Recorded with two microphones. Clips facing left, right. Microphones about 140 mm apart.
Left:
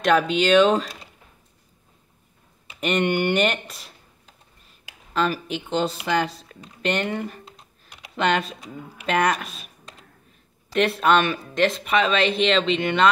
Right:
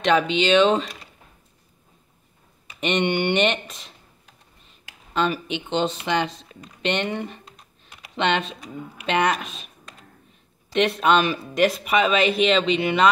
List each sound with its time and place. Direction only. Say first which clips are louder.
0.0 s speech: even; 5° left (ahead or behind)
2.8 s speech: even; 5° left (ahead or behind)
5.1 s speech: even; centre (ahead or behind)
6.8 s typing: even; 5° left (ahead or behind)
9.0 s speech: even; centre (ahead or behind)
10.7 s speech: even; centre (ahead or behind)